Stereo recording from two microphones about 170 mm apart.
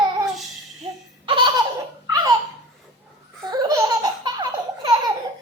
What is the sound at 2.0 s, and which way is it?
Baby laughter, 20° right (ahead or behind).